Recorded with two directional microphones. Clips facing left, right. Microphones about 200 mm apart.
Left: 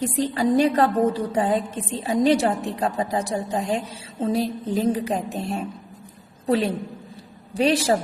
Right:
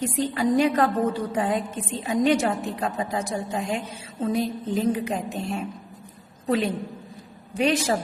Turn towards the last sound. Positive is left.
turn(degrees=35)  # may be behind; listen again after turning